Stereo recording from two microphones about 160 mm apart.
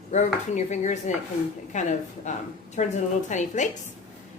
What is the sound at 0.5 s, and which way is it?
A woman's voice, 50° left (ahead or behind).